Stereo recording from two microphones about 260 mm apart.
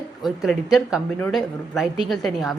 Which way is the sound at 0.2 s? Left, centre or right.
Centre.